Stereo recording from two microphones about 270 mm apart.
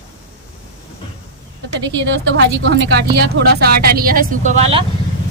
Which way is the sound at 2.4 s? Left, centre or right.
Right.